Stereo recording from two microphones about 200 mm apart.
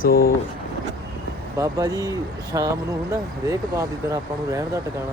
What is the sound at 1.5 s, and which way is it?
Speech, 15° right (ahead or behind).